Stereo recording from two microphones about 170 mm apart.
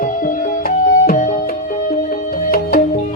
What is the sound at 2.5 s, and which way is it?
Music, 60° left (ahead or behind).